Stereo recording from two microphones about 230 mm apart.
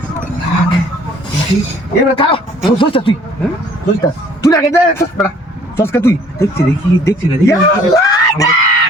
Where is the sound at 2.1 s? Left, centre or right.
Left.